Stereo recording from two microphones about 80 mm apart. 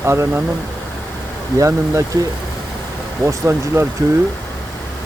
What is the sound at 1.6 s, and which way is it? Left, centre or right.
Speech, right.